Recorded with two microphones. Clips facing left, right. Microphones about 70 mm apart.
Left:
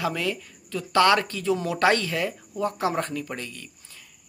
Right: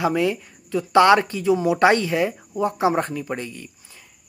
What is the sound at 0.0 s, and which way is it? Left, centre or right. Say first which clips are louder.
Speech: right 6 dB; right.